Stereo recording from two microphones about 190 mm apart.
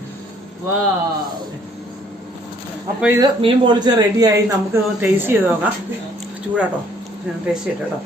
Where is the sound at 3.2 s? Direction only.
25° right (ahead or behind).